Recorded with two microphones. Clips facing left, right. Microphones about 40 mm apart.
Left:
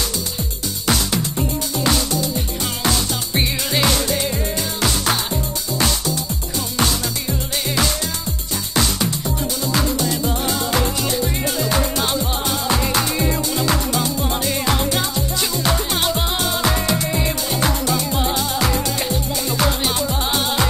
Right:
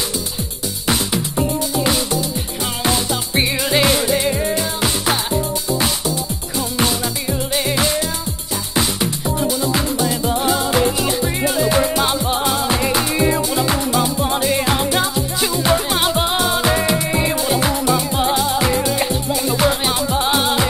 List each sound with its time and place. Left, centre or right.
0.8 s music: centre
6.8 s music: centre